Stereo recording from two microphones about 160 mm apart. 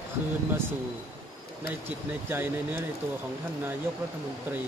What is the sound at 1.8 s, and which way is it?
Speech, 15° right (ahead or behind).